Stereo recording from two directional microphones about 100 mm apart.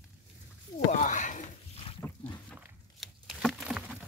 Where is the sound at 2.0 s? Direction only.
20° left (ahead or behind).